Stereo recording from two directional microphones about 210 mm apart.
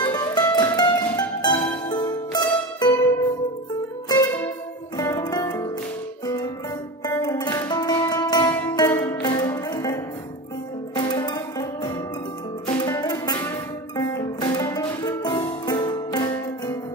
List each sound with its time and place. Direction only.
0.0 s music: 20° left (ahead or behind)
4.9 s music: 20° left (ahead or behind)
11.0 s music: 20° left (ahead or behind)